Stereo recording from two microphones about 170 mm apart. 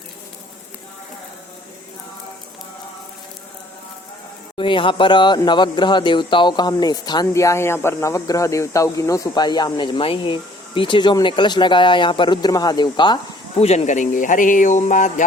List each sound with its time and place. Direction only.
4.5 s speech: 30° left (ahead or behind)
13.6 s speech: 40° left (ahead or behind)